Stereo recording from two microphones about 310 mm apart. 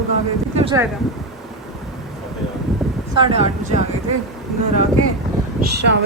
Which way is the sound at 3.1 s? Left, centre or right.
Centre.